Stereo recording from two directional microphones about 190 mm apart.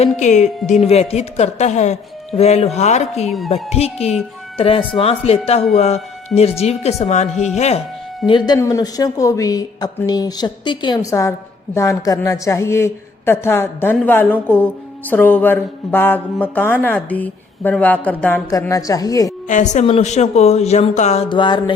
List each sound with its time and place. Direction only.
0.0 s speech: 40° left (ahead or behind)
8.3 s speech: 25° left (ahead or behind)
19.5 s speech: 40° left (ahead or behind)